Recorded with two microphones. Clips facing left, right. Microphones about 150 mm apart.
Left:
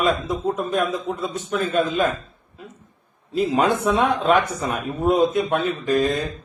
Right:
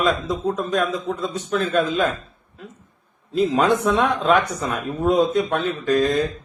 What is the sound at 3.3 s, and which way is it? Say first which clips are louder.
A man's voice: right 1 dB; 10° left (ahead or behind).